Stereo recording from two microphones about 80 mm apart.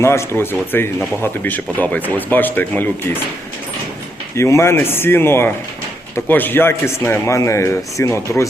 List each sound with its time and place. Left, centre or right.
0.0 s a man's voice: left
4.4 s a man's voice: left